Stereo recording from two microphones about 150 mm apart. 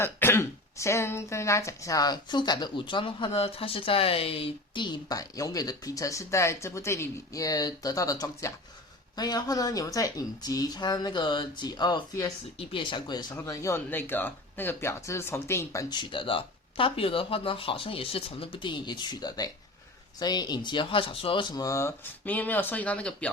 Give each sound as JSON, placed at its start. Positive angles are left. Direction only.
{"t": 0.0, "sound": "speech", "side_deg": 15}